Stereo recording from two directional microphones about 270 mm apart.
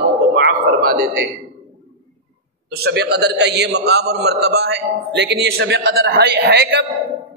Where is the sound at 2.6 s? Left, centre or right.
Right.